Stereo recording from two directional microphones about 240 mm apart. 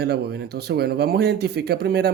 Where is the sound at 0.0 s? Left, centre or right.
Right.